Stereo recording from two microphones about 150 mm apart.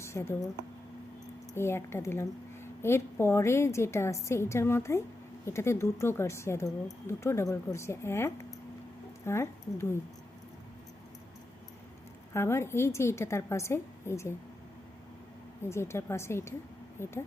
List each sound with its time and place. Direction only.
0.0 s speech: 20° left (ahead or behind)
1.5 s a woman's voice: 15° left (ahead or behind)
12.3 s a woman's voice: 15° left (ahead or behind)
15.7 s a woman's voice: 15° left (ahead or behind)